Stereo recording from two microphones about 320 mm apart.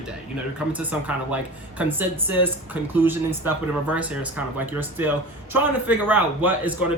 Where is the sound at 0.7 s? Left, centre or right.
Centre.